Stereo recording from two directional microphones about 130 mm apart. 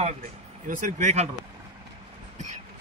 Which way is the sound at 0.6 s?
75° right (ahead or behind).